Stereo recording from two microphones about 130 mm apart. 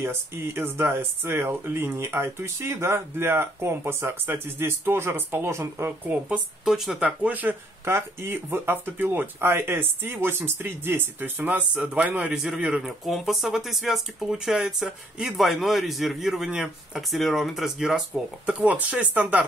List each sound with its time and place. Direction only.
0.0 s speech: 20° right (ahead or behind)